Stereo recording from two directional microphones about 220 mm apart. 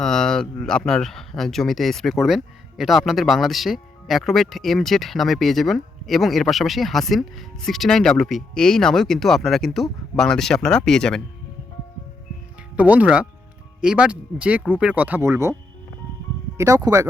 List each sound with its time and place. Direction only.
0.0 s speech: centre (ahead or behind)
12.7 s speech: 5° right (ahead or behind)
16.6 s speech: 15° right (ahead or behind)